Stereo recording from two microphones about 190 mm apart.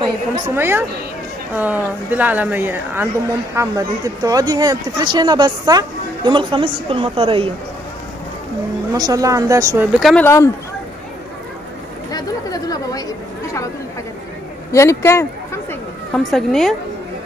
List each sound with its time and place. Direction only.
0.6 s speech: 10° right (ahead or behind); by 7.4 s 30° right (ahead or behind)
8.9 s speech: 20° right (ahead or behind)
9.9 s a woman's voice: centre (ahead or behind)
10.2 s speech: 15° left (ahead or behind)
12.1 s chatter: 20° left (ahead or behind)
14.7 s chatter: 15° left (ahead or behind)
16.3 s a woman's voice: centre (ahead or behind)